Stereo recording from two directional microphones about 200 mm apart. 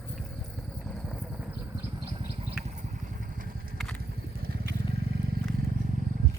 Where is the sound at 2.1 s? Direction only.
25° right (ahead or behind).